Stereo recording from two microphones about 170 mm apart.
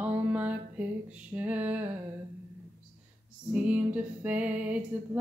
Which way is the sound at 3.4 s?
10° right (ahead or behind).